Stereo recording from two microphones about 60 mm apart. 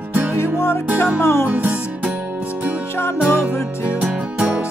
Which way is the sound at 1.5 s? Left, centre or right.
Right.